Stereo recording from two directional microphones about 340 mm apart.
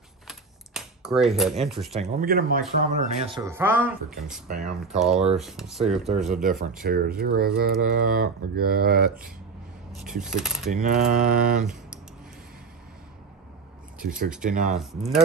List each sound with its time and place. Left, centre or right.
0.3 s typing: centre
2.0 s speech: right; by 4.4 s centre
4.5 s speech: right
4.9 s speech: centre
6.8 s speech: right
10.0 s speech: centre
10.7 s speech: right
13.9 s speech: right
14.8 s speech: centre